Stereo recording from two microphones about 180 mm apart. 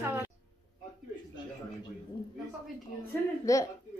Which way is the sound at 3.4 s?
20° left (ahead or behind).